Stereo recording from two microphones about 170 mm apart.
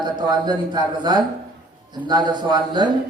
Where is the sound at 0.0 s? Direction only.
25° right (ahead or behind).